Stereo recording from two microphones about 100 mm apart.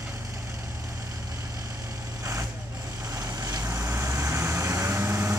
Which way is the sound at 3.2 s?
35° right (ahead or behind).